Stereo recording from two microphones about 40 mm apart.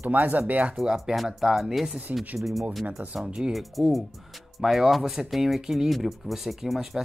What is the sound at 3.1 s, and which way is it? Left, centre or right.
Speech, right.